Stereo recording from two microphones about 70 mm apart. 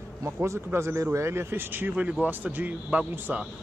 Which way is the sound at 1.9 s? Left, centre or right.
Centre.